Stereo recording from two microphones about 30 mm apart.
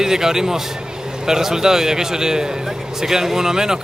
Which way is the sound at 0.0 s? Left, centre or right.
Centre.